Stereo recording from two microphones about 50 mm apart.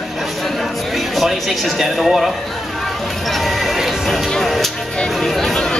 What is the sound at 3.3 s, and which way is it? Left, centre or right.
Speech, centre.